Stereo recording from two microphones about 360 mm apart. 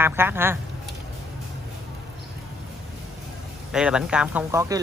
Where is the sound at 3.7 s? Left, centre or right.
Centre.